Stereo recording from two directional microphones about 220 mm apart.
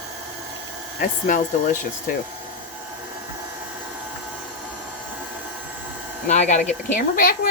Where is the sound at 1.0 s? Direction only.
35° left (ahead or behind).